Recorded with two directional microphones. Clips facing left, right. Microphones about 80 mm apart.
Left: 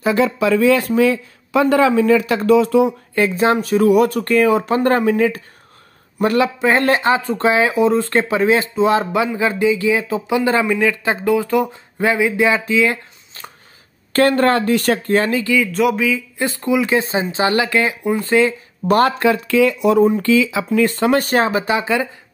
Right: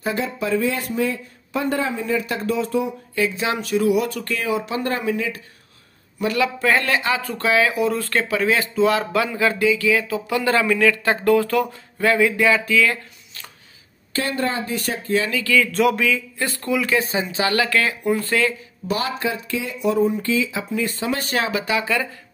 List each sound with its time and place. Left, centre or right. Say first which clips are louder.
0.0 s speech: left 8 dB; left
3.2 s a man's voice: left 7 dB; left
6.4 s speech: even; left
14.1 s speech: left 9 dB; left
15.1 s speech: left 3 dB; left
15.4 s speech: left 2 dB; centre
15.7 s speech: left 2 dB; centre
16.3 s speech: left 5 dB; left
18.9 s speech: left 9 dB; left
21.2 s speech: left 7 dB; left
21.5 s speech: left 4 dB; left